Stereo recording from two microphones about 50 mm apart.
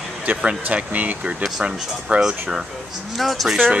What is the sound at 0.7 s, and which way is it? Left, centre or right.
Speech, right.